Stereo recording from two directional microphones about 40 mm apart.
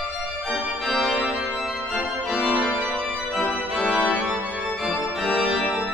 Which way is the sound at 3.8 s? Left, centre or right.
Right.